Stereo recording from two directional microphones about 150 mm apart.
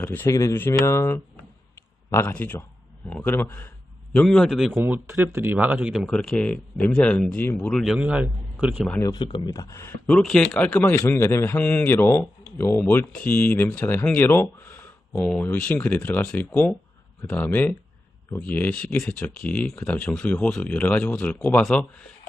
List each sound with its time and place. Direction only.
0.0 s a man's voice: 15° left (ahead or behind)
4.7 s speech: 10° right (ahead or behind)
7.9 s speech: 10° right (ahead or behind)
9.0 s speech: 25° left (ahead or behind)
10.1 s a man's voice: centre (ahead or behind)